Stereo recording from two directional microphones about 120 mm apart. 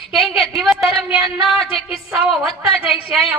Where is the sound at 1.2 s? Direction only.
45° left (ahead or behind).